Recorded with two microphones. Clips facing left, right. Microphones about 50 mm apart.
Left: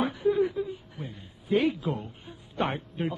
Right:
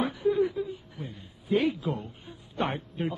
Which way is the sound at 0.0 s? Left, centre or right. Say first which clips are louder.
Left 1 dB; centre.